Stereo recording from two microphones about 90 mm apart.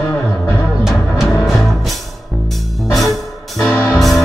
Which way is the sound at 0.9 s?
5° right (ahead or behind).